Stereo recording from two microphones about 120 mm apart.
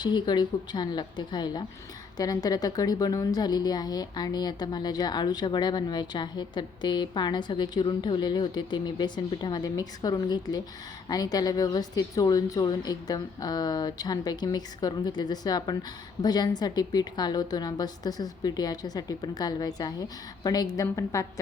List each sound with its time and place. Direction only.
0.0 s a woman's voice: 40° left (ahead or behind)